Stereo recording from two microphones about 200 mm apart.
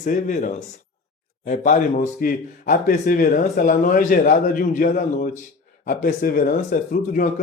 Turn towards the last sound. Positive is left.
turn(degrees=40)  # may be behind; listen again after turning